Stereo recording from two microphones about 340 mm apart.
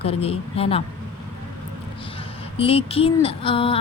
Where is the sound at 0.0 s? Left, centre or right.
Centre.